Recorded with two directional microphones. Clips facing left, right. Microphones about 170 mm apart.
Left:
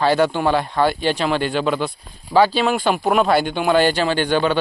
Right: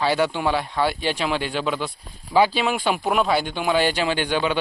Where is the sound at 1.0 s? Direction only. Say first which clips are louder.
Left 4 dB; 5° right (ahead or behind).